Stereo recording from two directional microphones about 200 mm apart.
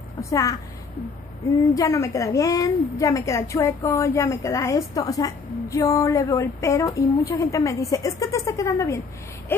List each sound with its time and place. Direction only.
0.2 s a woman's voice: 15° left (ahead or behind)
1.7 s a woman's voice: 15° left (ahead or behind)
9.5 s a sound: 10° left (ahead or behind)